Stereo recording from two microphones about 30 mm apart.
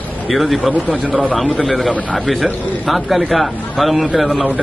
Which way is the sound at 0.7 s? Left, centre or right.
Right.